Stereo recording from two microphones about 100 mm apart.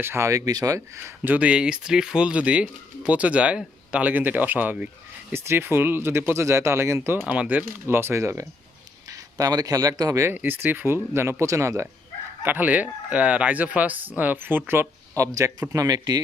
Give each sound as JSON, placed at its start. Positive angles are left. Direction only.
{"t": 0.0, "sound": "speech", "side_deg": -25}
{"t": 1.2, "sound": "speech", "side_deg": -15}
{"t": 10.3, "sound": "speech", "side_deg": -20}
{"t": 12.5, "sound": "speech", "side_deg": -15}